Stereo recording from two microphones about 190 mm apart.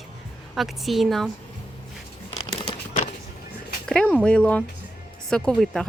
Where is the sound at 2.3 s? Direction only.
30° left (ahead or behind).